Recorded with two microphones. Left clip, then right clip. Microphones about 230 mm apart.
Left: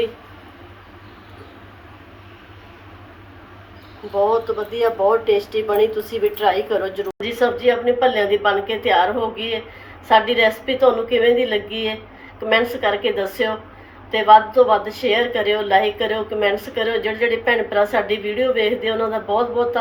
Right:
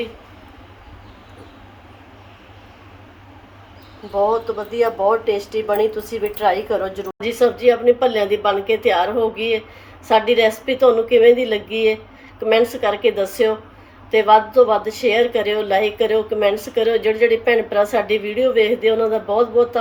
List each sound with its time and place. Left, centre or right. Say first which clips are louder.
4.1 s a woman's voice: even; right